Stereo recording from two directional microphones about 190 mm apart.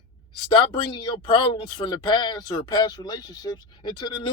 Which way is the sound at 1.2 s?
25° left (ahead or behind).